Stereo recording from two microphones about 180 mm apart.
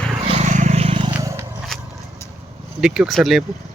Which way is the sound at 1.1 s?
15° right (ahead or behind).